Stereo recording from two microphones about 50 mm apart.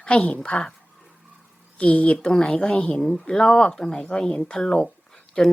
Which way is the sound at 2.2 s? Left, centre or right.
Centre.